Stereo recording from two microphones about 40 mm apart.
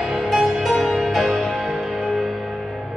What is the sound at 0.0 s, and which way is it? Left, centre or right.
Music, centre.